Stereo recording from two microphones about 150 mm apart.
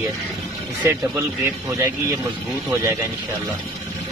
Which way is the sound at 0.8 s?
20° right (ahead or behind).